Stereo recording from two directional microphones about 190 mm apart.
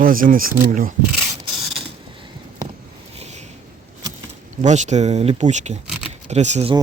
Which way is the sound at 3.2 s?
35° right (ahead or behind).